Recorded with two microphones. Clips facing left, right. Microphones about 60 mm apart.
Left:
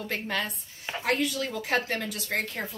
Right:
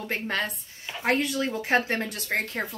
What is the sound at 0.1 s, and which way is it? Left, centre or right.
A woman's voice, right.